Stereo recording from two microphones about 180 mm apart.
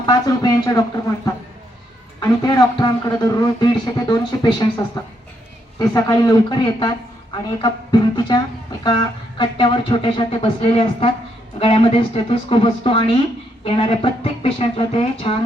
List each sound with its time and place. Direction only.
0.0 s speech: 20° left (ahead or behind)